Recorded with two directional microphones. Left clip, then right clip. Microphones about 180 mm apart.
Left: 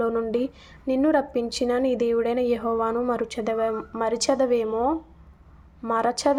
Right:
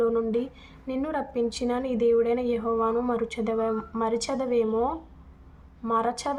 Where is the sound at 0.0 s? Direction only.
35° left (ahead or behind).